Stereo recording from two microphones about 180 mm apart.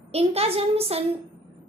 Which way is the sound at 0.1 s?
35° right (ahead or behind).